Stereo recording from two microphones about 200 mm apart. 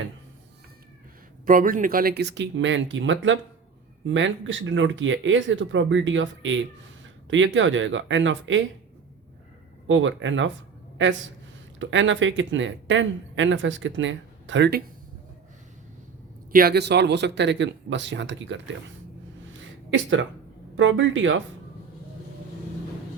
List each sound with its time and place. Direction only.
1.5 s speech: 45° right (ahead or behind); by 8.6 s 70° right (ahead or behind)
9.8 s speech: 70° right (ahead or behind)
11.8 s speech: 70° right (ahead or behind)
16.5 s speech: 50° right (ahead or behind); by 18.6 s 65° right (ahead or behind)
19.5 s a sound: 70° right (ahead or behind)
20.7 s speech: 70° right (ahead or behind)